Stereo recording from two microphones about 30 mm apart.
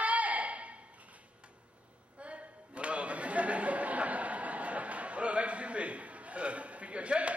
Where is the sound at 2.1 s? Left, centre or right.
Right.